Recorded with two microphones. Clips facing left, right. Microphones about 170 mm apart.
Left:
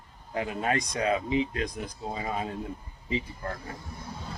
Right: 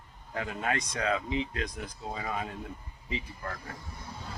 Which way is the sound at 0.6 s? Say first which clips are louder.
Left 3 dB; 30° left (ahead or behind).